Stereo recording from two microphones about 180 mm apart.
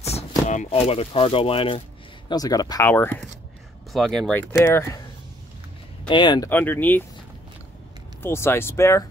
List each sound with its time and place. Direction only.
0.0 s speech: 40° left (ahead or behind)
2.2 s speech: 20° left (ahead or behind)
6.0 s speech: 25° left (ahead or behind)
6.5 s speech: 10° left (ahead or behind)
8.2 s speech: 15° left (ahead or behind)